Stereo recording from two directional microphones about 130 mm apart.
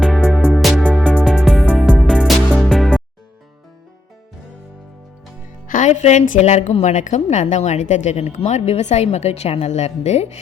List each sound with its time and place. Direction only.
0.0 s music: centre (ahead or behind)
5.6 s a woman's voice: 80° left; by 10.4 s 60° left (ahead or behind)